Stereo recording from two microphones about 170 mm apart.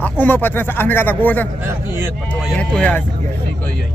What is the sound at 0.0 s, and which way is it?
Speech, 10° left (ahead or behind).